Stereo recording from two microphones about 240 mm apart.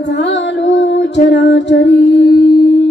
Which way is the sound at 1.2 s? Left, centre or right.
Left.